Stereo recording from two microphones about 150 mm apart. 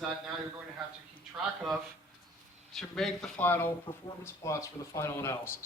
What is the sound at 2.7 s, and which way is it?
Speech, centre (ahead or behind).